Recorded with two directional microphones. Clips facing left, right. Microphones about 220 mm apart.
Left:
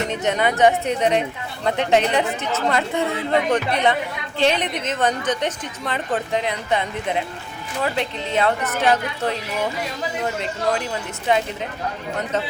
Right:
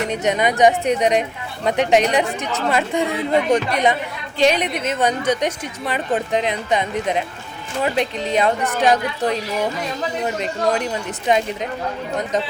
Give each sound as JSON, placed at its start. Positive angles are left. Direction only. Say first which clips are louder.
{"t": 0.1, "sound": "a woman's voice", "louder": "right 2 dB", "side_deg": -15}
{"t": 11.3, "sound": "a woman's voice", "louder": "right 2 dB", "side_deg": -20}